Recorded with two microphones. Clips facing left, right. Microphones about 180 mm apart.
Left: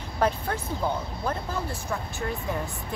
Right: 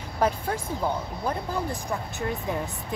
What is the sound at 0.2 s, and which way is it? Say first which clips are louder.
Speech: right 1 dB; 10° right (ahead or behind).